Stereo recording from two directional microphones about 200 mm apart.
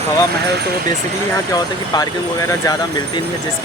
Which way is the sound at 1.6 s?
20° left (ahead or behind).